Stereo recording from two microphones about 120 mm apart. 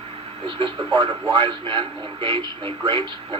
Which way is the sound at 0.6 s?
45° right (ahead or behind).